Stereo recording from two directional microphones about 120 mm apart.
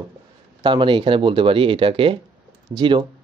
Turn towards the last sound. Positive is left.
turn(degrees=-40)  # may be behind; listen again after turning